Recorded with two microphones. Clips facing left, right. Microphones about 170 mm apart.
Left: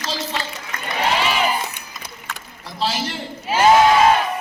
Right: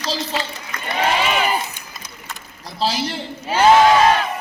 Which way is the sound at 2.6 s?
35° right (ahead or behind).